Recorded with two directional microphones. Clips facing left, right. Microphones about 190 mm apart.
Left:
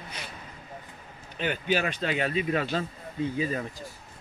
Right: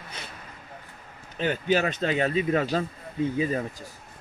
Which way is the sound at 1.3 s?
30° right (ahead or behind).